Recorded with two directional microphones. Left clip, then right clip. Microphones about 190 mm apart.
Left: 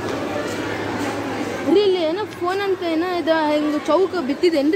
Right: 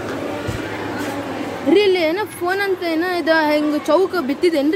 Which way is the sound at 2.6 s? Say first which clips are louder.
Right 1 dB; 20° right (ahead or behind).